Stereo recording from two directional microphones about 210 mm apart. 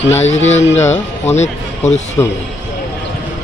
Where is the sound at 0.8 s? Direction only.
10° left (ahead or behind).